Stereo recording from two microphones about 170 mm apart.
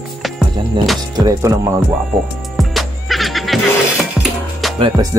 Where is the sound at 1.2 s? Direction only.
20° right (ahead or behind).